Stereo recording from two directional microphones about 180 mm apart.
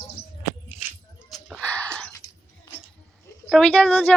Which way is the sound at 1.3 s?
Centre (ahead or behind).